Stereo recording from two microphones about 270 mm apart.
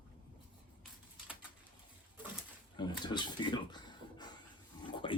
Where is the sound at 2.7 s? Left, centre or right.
Centre.